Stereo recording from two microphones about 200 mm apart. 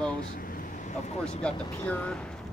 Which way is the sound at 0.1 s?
45° left (ahead or behind).